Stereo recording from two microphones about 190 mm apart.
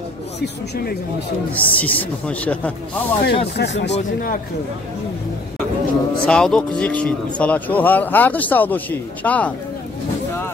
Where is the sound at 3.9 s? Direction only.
45° left (ahead or behind).